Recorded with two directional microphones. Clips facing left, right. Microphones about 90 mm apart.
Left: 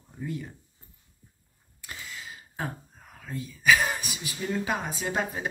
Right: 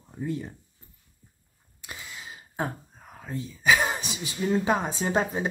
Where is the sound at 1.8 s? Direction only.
20° right (ahead or behind).